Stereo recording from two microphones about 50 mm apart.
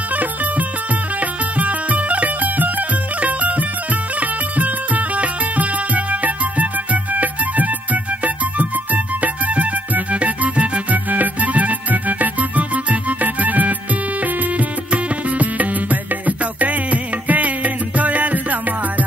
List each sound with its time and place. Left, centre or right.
0.1 s music: right